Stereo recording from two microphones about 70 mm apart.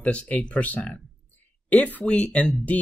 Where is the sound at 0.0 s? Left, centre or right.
Centre.